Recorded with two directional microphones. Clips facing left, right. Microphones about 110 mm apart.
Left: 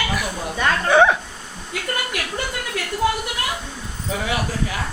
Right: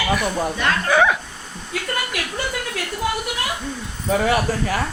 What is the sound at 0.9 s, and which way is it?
Speech, 30° left (ahead or behind).